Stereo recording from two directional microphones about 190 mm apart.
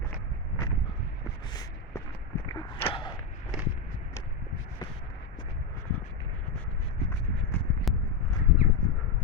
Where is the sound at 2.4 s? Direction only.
20° left (ahead or behind).